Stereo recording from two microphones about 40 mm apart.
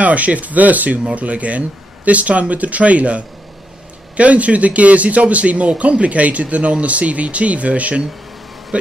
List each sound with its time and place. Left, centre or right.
0.0 s speech: right